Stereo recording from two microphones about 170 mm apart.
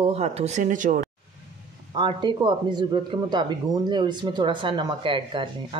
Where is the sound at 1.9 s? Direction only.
25° right (ahead or behind).